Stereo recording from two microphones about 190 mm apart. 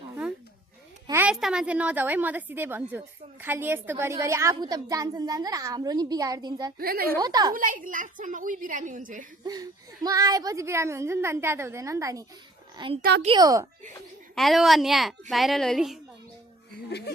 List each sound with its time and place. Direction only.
1.0 s a woman's voice: 10° right (ahead or behind)
6.7 s a woman's voice: 50° right (ahead or behind)
7.2 s a woman's voice: 20° right (ahead or behind)
7.5 s a woman's voice: 45° right (ahead or behind)
9.4 s a woman's voice: 20° right (ahead or behind)
13.0 s a child's voice: 60° right (ahead or behind)
13.2 s a woman's voice: 20° right (ahead or behind)
14.3 s speech: centre (ahead or behind)